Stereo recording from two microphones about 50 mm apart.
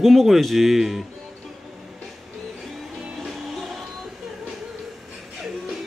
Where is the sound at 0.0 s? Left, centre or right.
Centre.